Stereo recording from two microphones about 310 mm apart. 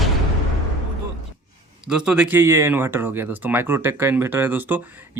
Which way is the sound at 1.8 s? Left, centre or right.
Centre.